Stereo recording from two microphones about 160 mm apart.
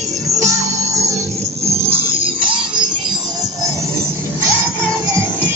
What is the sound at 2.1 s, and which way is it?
Music, 35° right (ahead or behind).